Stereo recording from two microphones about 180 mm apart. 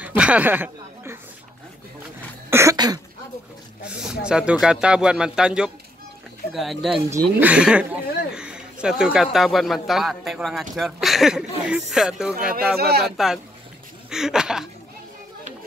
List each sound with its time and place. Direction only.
0.0 s speech: 5° right (ahead or behind)
2.5 s cough: 20° right (ahead or behind)
3.8 s speech: 5° right (ahead or behind)
12.7 s speech: 60° right (ahead or behind)
13.0 s speech: centre (ahead or behind)